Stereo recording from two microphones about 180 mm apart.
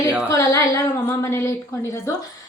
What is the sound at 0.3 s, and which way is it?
A woman's voice, 15° left (ahead or behind).